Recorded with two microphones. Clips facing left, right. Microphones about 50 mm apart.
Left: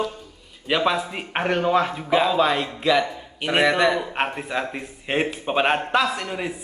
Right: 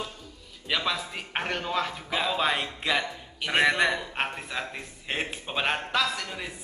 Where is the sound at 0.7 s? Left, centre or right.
Centre.